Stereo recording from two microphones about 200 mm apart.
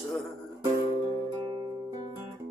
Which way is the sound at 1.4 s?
25° right (ahead or behind).